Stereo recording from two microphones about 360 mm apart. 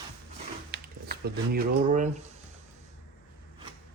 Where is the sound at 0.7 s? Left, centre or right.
Right.